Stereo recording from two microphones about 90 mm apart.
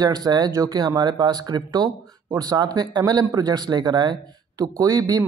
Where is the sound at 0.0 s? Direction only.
45° right (ahead or behind).